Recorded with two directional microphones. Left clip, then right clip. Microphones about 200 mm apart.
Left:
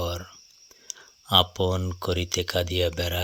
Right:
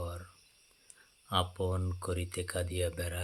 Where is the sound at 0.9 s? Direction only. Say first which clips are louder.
Left 14 dB; 45° left (ahead or behind).